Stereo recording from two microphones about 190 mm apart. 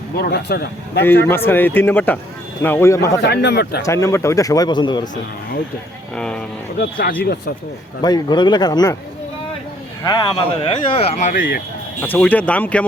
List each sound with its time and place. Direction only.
0.2 s speech: 60° left (ahead or behind)
1.0 s speech: 10° left (ahead or behind)
3.2 s speech: 60° left (ahead or behind)
3.8 s speech: 15° left (ahead or behind)
6.1 s speech: 5° left (ahead or behind)
8.0 s speech: 20° left (ahead or behind)
10.0 s speech: 20° left (ahead or behind)
11.3 s speech: 50° left (ahead or behind)
12.0 s speech: 10° left (ahead or behind)